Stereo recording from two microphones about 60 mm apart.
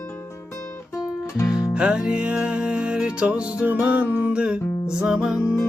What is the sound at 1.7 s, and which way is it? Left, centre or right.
Music, centre.